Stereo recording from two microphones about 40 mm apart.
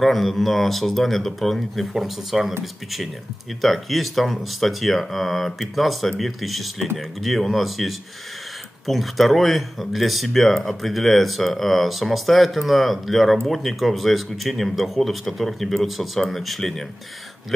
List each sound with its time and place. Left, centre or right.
0.0 s speech: centre